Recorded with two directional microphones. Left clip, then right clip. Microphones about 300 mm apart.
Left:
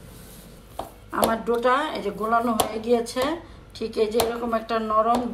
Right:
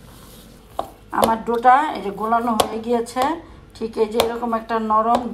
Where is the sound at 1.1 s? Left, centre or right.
Centre.